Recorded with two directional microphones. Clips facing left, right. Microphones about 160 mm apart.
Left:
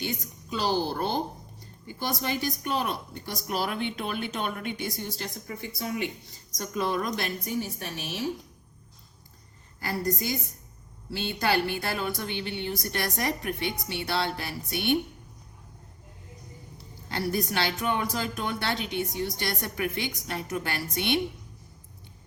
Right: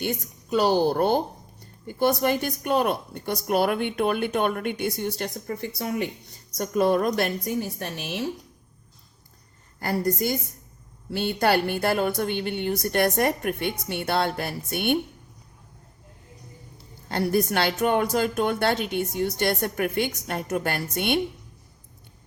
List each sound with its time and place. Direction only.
0.0 s speech: 50° right (ahead or behind)
9.8 s speech: 50° right (ahead or behind)
17.1 s speech: 50° right (ahead or behind)